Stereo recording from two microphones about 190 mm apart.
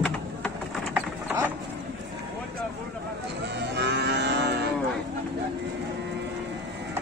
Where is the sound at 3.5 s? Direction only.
60° right (ahead or behind).